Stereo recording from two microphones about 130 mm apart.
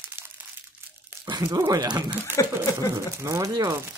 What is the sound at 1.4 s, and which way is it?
Speech, 20° right (ahead or behind).